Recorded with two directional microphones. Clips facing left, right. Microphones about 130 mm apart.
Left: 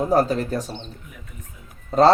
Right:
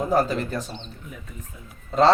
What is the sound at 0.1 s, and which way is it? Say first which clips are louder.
Speech: left 2 dB; 40° left (ahead or behind).